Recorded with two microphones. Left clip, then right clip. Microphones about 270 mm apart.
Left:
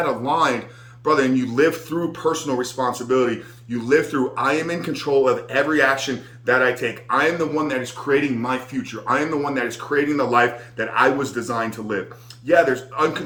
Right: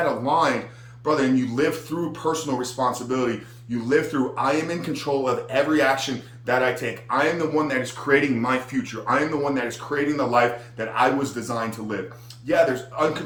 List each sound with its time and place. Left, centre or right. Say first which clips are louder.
0.0 s speech: left 1 dB; centre